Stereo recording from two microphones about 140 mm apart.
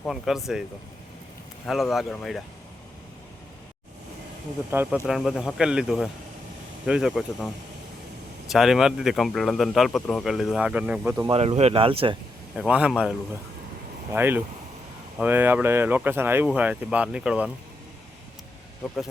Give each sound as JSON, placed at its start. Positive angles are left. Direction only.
{"t": 0.1, "sound": "speech", "side_deg": 0}
{"t": 1.6, "sound": "speech", "side_deg": 0}
{"t": 4.7, "sound": "speech", "side_deg": -15}
{"t": 5.0, "sound": "speech", "side_deg": -5}
{"t": 11.3, "sound": "speech", "side_deg": -45}
{"t": 12.5, "sound": "speech", "side_deg": -10}
{"t": 14.1, "sound": "speech", "side_deg": -15}
{"t": 18.8, "sound": "speech", "side_deg": 0}